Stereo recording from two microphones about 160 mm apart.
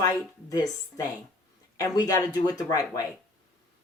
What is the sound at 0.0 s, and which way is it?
Speech, 20° left (ahead or behind).